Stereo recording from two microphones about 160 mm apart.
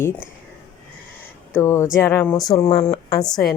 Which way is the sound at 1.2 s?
15° left (ahead or behind).